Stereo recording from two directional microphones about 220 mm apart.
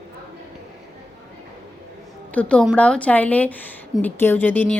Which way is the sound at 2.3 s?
5° left (ahead or behind).